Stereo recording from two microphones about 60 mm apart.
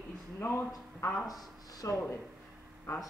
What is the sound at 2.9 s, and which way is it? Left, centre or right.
Speech, left.